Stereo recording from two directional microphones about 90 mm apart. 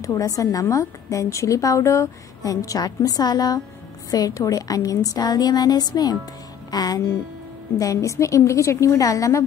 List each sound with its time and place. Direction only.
0.0 s a woman's voice: 40° left (ahead or behind)
6.7 s music: 45° left (ahead or behind)
7.8 s a woman's voice: 35° left (ahead or behind)